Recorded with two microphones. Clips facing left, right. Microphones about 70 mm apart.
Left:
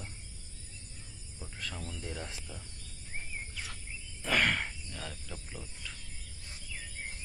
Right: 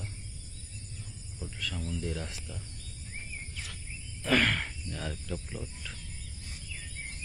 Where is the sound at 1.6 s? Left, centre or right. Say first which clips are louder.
Right 3 dB; left.